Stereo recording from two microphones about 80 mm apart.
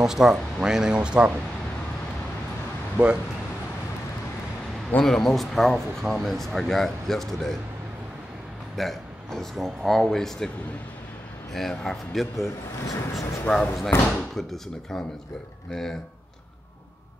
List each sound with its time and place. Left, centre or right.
0.0 s speech: centre
3.0 s speech: centre
5.0 s speech: centre
8.7 s speech: centre
11.5 s speech: centre
12.8 s speech: left
13.8 s speech: left
14.3 s speech: centre